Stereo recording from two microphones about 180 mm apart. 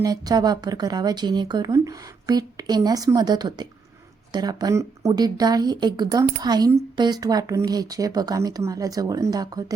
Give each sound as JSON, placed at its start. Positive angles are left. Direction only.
{"t": 0.0, "sound": "speech", "side_deg": -20}